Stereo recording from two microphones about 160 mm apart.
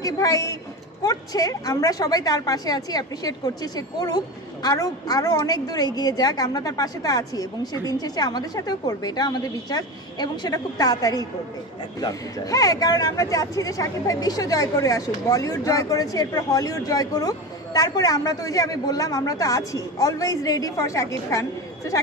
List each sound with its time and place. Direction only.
0.0 s speech: 20° left (ahead or behind)